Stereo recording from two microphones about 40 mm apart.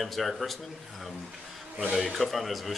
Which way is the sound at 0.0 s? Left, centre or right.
Centre.